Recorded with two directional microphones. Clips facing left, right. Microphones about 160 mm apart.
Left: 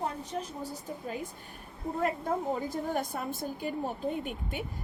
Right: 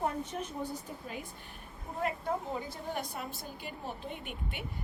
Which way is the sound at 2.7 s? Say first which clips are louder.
Left 6 dB; 45° left (ahead or behind).